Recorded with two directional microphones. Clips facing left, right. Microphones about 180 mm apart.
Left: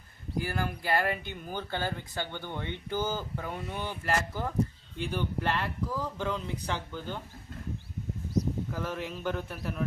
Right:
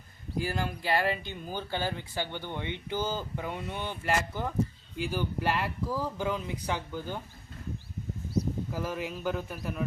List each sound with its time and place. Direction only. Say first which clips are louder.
0.4 s speech: right 1 dB; 20° right (ahead or behind)
3.5 s speech: even; 5° left (ahead or behind)
3.8 s speech: right 1 dB; 15° right (ahead or behind)
8.7 s speech: right 1 dB; 5° right (ahead or behind)